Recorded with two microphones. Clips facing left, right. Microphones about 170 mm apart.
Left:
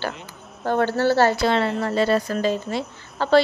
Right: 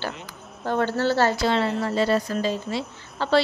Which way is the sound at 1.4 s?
60° left (ahead or behind).